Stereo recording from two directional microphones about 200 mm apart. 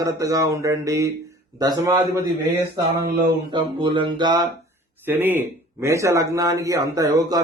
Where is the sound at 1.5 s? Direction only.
20° right (ahead or behind).